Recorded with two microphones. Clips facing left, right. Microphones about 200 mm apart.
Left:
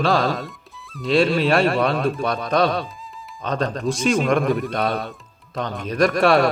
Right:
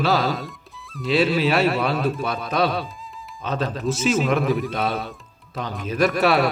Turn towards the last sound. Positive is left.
turn(degrees=-5)  # may be behind; listen again after turning